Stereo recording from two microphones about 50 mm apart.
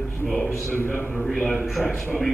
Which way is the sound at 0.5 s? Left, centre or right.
Left.